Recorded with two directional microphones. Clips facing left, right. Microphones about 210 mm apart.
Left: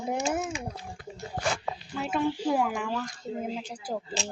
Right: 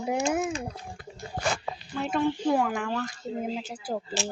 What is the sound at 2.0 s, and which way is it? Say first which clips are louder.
Speech: right 2 dB; 5° left (ahead or behind).